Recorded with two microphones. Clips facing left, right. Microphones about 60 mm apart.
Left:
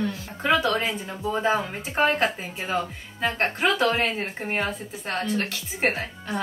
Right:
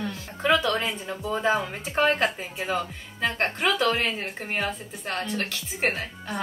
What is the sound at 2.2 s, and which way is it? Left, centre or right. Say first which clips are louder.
Speech: even; centre.